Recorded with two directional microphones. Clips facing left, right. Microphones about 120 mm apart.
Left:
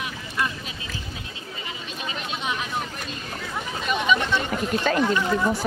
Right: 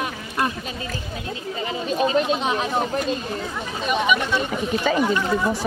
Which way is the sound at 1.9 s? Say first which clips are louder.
Right 14 dB; 40° right (ahead or behind).